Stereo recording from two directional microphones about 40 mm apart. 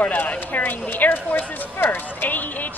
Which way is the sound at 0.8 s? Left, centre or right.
Left.